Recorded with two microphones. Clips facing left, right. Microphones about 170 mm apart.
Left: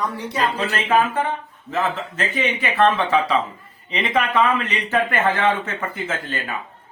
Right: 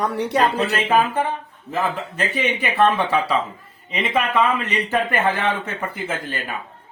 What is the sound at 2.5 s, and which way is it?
A man's voice, 10° right (ahead or behind).